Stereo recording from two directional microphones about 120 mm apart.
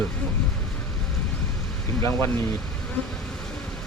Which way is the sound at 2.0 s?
20° left (ahead or behind).